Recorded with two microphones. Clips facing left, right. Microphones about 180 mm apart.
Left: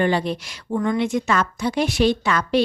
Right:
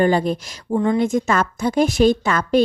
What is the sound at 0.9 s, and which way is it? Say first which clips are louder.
A woman's voice: right 3 dB; 45° right (ahead or behind).